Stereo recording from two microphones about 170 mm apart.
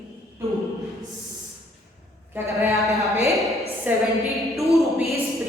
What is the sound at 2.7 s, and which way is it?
Speech, centre (ahead or behind).